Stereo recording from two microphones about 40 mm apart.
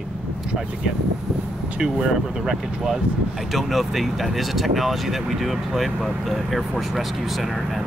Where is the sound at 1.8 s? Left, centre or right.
Centre.